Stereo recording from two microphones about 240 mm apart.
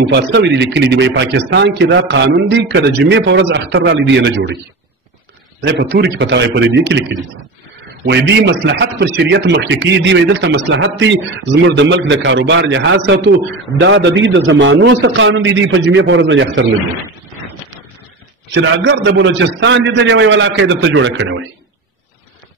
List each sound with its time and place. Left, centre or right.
0.0 s a man's voice: right
5.7 s a man's voice: right
18.5 s a man's voice: right